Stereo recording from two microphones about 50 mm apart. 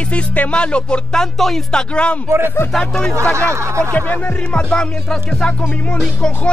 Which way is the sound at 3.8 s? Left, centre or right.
Left.